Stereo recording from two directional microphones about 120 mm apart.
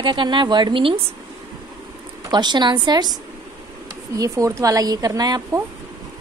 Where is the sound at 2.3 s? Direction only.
35° right (ahead or behind).